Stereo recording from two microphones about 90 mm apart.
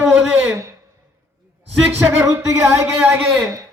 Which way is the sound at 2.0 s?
30° right (ahead or behind).